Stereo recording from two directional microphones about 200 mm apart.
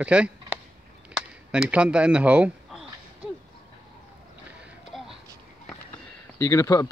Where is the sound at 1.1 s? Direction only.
5° right (ahead or behind).